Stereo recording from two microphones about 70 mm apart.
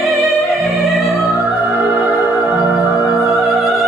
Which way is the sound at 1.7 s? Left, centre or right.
Right.